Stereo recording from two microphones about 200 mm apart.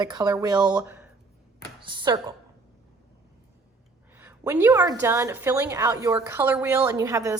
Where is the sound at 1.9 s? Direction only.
25° right (ahead or behind).